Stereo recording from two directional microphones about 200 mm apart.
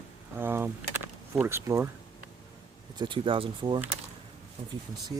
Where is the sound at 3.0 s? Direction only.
25° right (ahead or behind).